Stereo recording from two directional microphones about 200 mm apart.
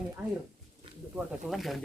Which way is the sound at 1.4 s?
Centre (ahead or behind).